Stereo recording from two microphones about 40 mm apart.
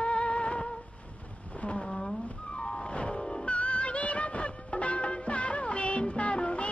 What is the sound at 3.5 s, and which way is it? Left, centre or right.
Music, left.